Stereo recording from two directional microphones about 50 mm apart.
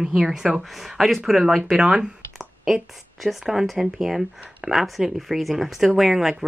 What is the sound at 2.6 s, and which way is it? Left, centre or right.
Speech, centre.